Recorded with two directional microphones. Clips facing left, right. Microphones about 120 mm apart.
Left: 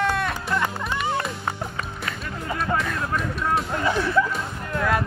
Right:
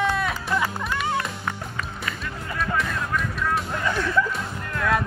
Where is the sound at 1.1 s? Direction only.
30° left (ahead or behind).